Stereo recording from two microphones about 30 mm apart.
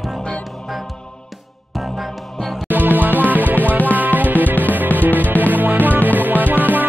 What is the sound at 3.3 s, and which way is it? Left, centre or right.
Music, right.